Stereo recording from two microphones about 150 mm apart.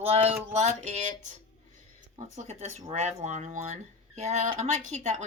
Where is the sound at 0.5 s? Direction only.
50° right (ahead or behind).